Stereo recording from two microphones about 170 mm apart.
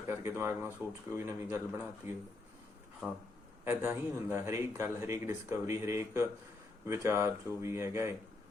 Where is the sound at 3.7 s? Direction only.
15° right (ahead or behind).